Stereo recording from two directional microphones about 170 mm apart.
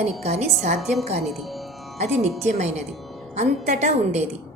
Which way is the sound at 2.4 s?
40° right (ahead or behind).